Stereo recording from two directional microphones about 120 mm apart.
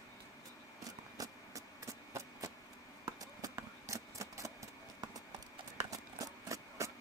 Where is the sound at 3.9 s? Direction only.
25° right (ahead or behind).